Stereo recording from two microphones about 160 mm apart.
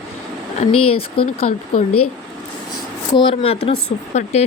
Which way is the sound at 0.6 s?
35° left (ahead or behind).